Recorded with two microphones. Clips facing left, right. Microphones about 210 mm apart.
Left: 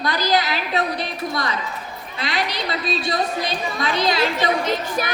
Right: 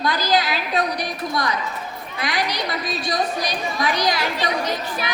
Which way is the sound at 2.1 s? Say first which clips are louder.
Even; 25° left (ahead or behind).